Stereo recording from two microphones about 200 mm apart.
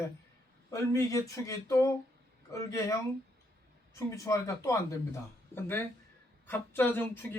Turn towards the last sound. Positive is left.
turn(degrees=10)  # may be behind; listen again after turning